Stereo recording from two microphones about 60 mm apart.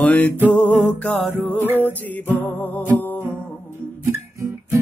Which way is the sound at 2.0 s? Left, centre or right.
Left.